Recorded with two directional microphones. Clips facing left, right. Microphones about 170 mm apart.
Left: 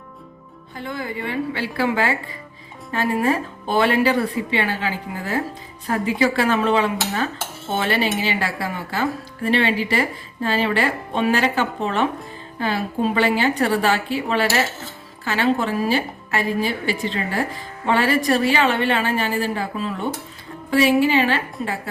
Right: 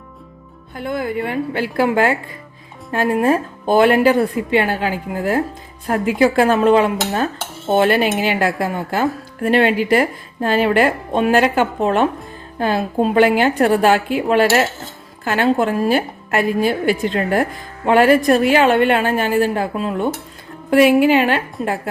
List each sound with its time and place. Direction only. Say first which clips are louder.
0.8 s a woman's voice: right 7 dB; 55° right (ahead or behind)